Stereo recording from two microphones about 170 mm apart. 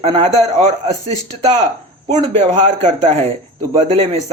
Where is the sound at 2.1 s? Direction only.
45° right (ahead or behind).